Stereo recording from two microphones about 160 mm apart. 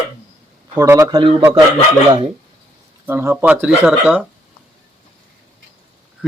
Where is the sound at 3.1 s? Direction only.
15° right (ahead or behind).